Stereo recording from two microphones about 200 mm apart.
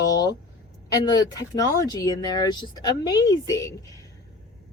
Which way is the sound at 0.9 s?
20° left (ahead or behind).